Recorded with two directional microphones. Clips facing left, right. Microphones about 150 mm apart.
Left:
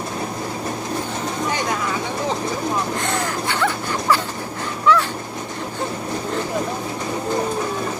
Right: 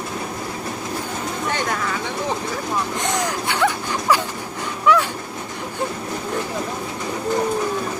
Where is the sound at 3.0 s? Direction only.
15° right (ahead or behind).